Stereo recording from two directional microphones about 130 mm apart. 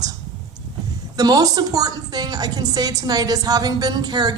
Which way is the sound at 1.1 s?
30° right (ahead or behind).